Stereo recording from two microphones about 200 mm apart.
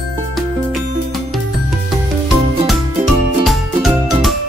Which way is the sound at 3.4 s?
Centre (ahead or behind).